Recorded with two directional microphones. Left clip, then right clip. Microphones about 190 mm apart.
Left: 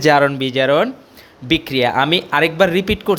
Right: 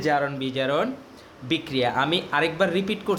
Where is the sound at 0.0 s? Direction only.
50° left (ahead or behind).